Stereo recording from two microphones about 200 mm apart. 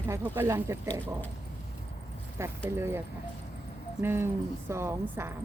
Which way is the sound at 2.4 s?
15° right (ahead or behind).